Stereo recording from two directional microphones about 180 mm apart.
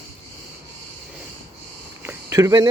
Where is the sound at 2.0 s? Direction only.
15° right (ahead or behind).